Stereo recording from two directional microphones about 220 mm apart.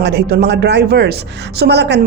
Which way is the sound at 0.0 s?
50° right (ahead or behind).